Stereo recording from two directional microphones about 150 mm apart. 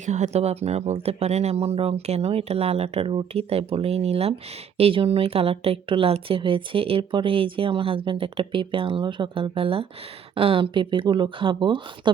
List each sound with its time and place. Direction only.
0.0 s speech: 50° right (ahead or behind); by 12.1 s 35° right (ahead or behind)